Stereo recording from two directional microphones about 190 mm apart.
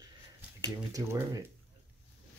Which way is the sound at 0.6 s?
20° right (ahead or behind).